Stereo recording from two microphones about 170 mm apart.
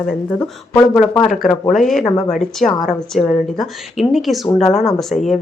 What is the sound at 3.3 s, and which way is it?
Speech, 50° left (ahead or behind).